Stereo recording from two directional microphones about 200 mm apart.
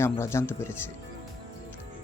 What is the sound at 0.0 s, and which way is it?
Speech, 10° left (ahead or behind).